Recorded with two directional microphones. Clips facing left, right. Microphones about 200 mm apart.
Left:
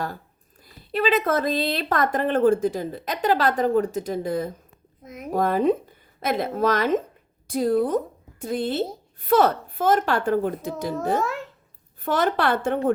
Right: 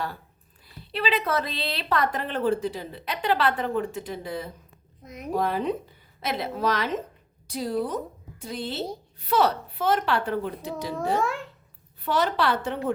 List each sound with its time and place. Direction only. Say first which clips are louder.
0.9 s speech: left 5 dB; 45° left (ahead or behind)
5.0 s speech: left 2 dB; 5° left (ahead or behind)
5.3 s a woman's voice: left 5 dB; 50° left (ahead or behind)
12.0 s speech: left 2 dB; 50° left (ahead or behind)